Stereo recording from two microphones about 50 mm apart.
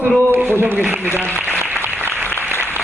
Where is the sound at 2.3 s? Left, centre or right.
Left.